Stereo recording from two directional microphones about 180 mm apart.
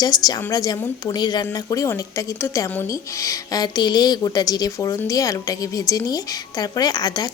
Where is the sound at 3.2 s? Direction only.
20° left (ahead or behind).